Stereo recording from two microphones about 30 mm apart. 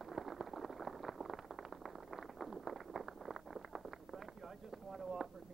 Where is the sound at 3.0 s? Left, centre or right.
Centre.